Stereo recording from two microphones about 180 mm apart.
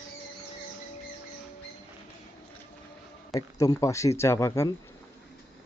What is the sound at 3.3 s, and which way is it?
Speech, 20° left (ahead or behind).